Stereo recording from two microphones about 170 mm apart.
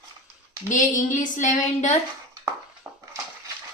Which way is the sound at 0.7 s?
50° left (ahead or behind).